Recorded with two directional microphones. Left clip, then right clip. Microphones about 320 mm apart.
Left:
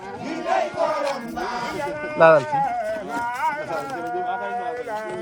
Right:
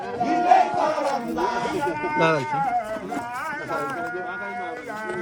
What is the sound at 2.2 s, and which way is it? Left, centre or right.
Speech, left.